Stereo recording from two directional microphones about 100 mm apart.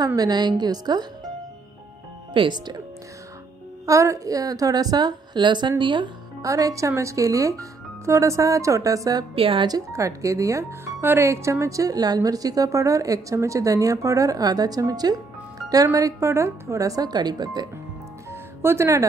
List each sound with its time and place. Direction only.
0.0 s a woman's voice: 40° right (ahead or behind)
2.3 s a woman's voice: 50° right (ahead or behind)
3.8 s speech: 30° right (ahead or behind); by 6.0 s 55° right (ahead or behind)
6.4 s speech: 35° right (ahead or behind)
9.3 s a woman's voice: 65° right (ahead or behind)
9.7 s speech: 35° right (ahead or behind)
18.3 s music: 25° right (ahead or behind)